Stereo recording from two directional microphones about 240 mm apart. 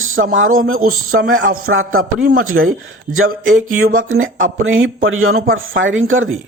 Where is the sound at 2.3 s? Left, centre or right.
Right.